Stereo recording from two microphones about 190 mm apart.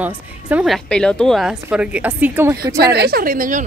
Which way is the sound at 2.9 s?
55° right (ahead or behind).